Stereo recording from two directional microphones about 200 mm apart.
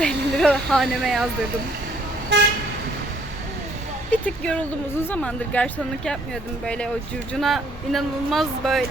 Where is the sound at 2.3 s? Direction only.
60° right (ahead or behind).